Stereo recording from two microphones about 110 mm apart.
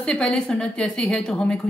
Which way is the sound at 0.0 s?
5° left (ahead or behind).